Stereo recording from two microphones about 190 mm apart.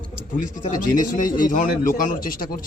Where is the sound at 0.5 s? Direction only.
45° left (ahead or behind).